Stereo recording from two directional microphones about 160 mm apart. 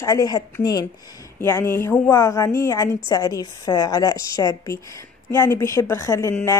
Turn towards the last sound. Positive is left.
turn(degrees=15)  # may be behind; listen again after turning